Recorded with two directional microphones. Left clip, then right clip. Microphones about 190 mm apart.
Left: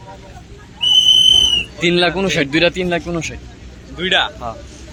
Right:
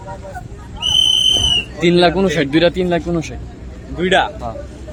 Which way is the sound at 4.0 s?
25° right (ahead or behind).